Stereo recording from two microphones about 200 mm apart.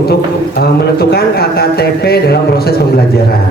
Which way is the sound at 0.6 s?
50° left (ahead or behind).